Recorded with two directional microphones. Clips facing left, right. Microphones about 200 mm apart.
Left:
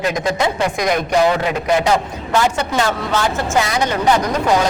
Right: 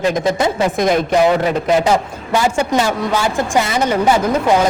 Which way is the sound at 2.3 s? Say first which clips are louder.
Right 2 dB; 10° right (ahead or behind).